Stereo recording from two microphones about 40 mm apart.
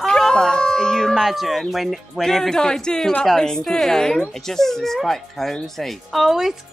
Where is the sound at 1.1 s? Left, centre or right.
Centre.